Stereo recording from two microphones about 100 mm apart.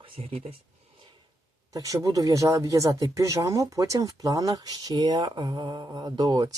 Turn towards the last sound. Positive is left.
turn(degrees=-45)  # may be behind; listen again after turning